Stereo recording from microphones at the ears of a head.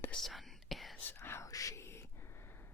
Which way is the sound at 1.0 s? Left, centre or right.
Left.